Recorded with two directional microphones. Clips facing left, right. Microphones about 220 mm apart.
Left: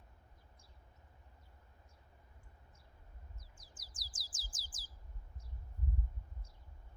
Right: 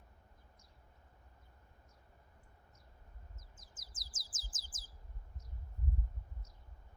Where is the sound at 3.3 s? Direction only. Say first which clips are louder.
Even; 20° right (ahead or behind).